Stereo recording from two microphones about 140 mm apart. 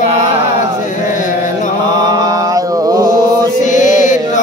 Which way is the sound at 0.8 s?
65° left (ahead or behind).